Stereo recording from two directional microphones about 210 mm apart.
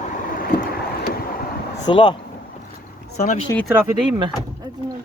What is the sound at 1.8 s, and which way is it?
Speech, 25° left (ahead or behind).